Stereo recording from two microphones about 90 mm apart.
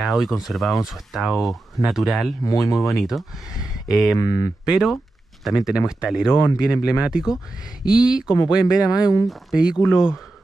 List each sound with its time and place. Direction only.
0.0 s speech: centre (ahead or behind)
2.4 s speech: 40° left (ahead or behind)
2.9 s speech: centre (ahead or behind)
4.1 s speech: 40° left (ahead or behind)
4.6 s speech: 5° right (ahead or behind)